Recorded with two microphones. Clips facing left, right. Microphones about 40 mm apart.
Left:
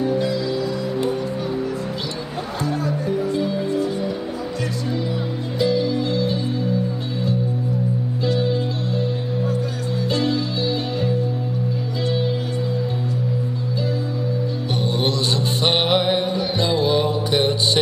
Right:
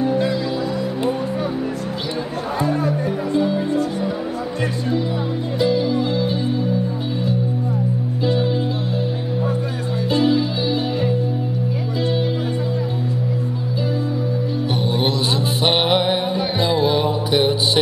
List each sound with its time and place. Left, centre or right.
0.0 s music: centre
2.6 s music: right
2.9 s music: centre
5.6 s music: centre
8.3 s music: centre
10.1 s music: centre
15.6 s music: centre